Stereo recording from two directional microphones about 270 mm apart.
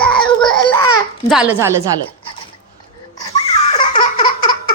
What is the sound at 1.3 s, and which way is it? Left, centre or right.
Speech, centre.